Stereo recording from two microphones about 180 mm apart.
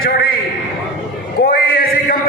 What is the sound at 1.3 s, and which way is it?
Male singing, 55° left (ahead or behind).